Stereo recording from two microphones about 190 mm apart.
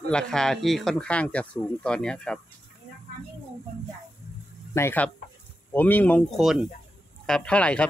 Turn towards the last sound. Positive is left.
turn(degrees=5)  # may be behind; listen again after turning